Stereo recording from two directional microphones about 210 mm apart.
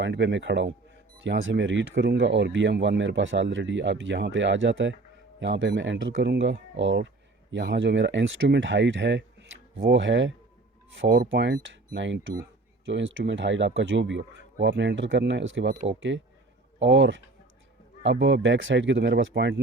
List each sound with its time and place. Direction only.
0.0 s speech: 60° right (ahead or behind)